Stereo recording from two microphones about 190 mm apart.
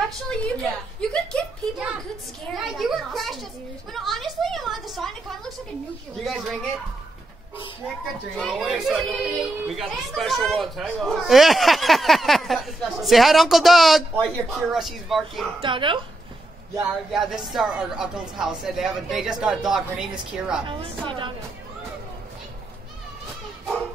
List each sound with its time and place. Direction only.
0.3 s speech: 5° left (ahead or behind)
3.9 s a sound: centre (ahead or behind)
6.2 s speech: centre (ahead or behind)
8.4 s speech: centre (ahead or behind)
15.6 s a woman's voice: 25° right (ahead or behind)
17.1 s speech: centre (ahead or behind)
20.6 s a woman's voice: 25° right (ahead or behind)